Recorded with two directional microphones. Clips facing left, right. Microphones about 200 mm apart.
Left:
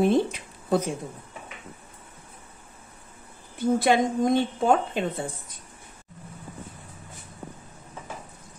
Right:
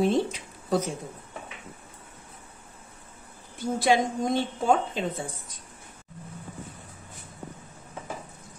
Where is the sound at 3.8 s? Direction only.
55° left (ahead or behind).